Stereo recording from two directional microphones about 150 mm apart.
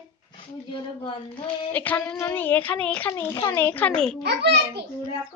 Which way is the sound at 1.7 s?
10° left (ahead or behind).